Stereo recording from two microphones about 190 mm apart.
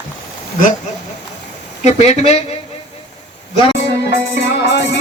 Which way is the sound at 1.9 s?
35° left (ahead or behind).